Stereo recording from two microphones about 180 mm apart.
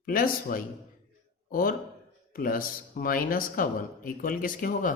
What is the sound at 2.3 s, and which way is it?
Speech, 50° left (ahead or behind).